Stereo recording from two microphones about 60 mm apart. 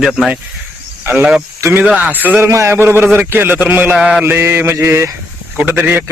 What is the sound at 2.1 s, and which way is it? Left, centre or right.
Speech, right.